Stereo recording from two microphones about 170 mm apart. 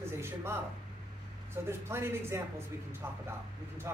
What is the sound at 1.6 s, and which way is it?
Speech, 15° right (ahead or behind).